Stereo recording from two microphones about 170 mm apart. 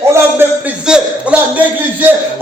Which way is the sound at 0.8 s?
5° right (ahead or behind).